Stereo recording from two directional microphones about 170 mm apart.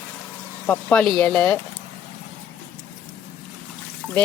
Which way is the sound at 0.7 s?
5° left (ahead or behind).